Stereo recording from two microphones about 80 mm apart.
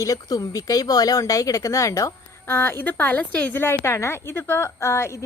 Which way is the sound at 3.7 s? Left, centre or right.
Left.